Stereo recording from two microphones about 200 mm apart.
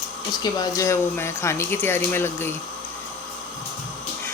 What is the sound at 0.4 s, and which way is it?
Speech, 20° left (ahead or behind).